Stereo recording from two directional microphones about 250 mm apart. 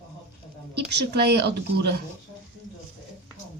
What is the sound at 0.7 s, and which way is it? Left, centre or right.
Speech, right.